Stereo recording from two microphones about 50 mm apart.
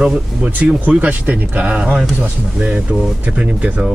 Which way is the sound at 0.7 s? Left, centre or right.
Right.